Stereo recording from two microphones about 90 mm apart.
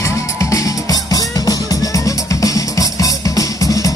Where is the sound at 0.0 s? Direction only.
35° left (ahead or behind).